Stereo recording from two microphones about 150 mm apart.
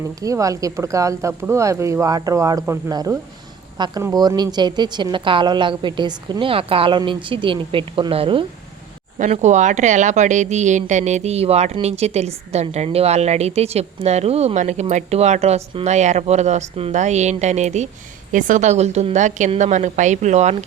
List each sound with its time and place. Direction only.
0.2 s a woman's voice: 20° right (ahead or behind); by 8.4 s 35° right (ahead or behind)
9.1 s speech: 55° right (ahead or behind)